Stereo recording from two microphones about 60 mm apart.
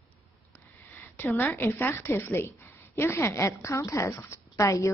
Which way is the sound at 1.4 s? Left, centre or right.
Left.